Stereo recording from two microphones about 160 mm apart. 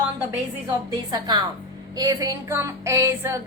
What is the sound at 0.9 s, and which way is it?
Female singing, 25° right (ahead or behind).